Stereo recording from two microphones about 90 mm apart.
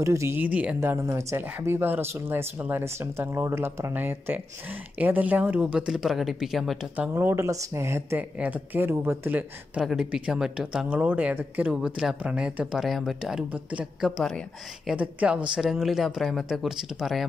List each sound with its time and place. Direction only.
0.0 s speech: 35° right (ahead or behind)
0.4 s speech: 15° right (ahead or behind)
0.7 s speech: 30° right (ahead or behind); by 6.9 s 5° right (ahead or behind)
7.0 s speech: 25° right (ahead or behind)
8.2 s speech: 15° right (ahead or behind)
9.8 s speech: 5° right (ahead or behind)
13.5 s speech: 15° right (ahead or behind)
14.0 s speech: centre (ahead or behind)
15.0 s speech: 15° right (ahead or behind)